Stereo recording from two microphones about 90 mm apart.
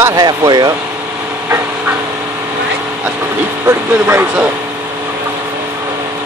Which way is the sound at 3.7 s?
30° right (ahead or behind).